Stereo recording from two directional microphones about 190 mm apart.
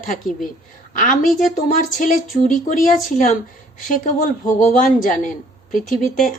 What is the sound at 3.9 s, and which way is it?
Speech, 40° left (ahead or behind).